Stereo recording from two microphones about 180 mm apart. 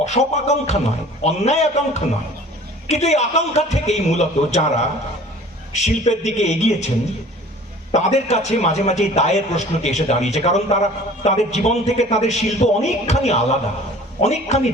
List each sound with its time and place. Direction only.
0.0 s a man's voice: 40° left (ahead or behind)
5.7 s a man's voice: 40° left (ahead or behind)
7.9 s a man's voice: 40° left (ahead or behind)